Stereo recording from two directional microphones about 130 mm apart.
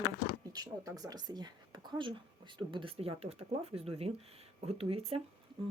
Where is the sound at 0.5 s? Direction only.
30° right (ahead or behind); by 5.2 s 45° right (ahead or behind).